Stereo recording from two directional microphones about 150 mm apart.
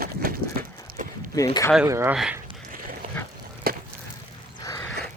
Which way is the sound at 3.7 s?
90° right.